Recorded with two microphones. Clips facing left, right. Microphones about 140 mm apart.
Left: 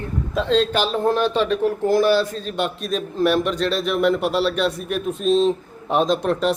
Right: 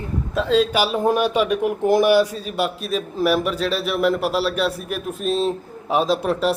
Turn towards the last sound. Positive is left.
turn(degrees=-5)  # may be behind; listen again after turning